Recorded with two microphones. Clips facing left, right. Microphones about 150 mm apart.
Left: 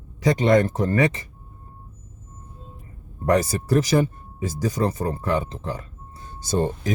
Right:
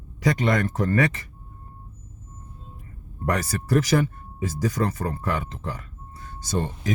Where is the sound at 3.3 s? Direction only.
25° left (ahead or behind).